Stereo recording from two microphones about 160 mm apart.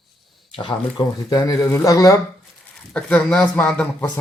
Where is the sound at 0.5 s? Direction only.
30° left (ahead or behind).